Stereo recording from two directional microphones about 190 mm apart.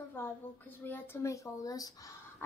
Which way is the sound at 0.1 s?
10° left (ahead or behind).